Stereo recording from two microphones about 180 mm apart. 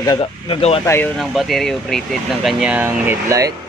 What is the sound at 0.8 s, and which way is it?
Speech, 15° left (ahead or behind).